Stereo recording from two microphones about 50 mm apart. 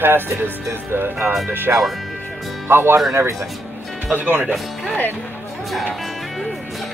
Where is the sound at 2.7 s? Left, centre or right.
Right.